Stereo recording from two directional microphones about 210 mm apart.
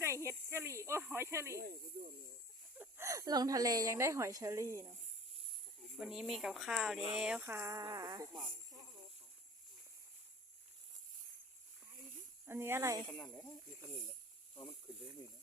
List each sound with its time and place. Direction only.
0.0 s speech: 15° right (ahead or behind)
1.5 s speech: 45° right (ahead or behind)
2.7 s a woman's voice: 10° right (ahead or behind)
6.0 s a woman's voice: centre (ahead or behind); by 8.4 s 20° right (ahead or behind)
12.5 s a woman's voice: 10° right (ahead or behind)
13.1 s speech: 10° left (ahead or behind)
14.5 s speech: 25° left (ahead or behind)